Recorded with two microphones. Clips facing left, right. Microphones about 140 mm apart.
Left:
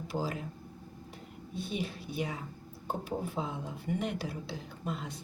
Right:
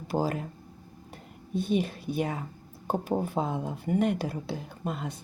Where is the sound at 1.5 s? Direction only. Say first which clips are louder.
Right 9 dB; 50° right (ahead or behind).